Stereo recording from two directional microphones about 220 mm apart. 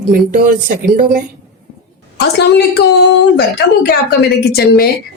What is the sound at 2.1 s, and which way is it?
A woman's voice, 50° left (ahead or behind).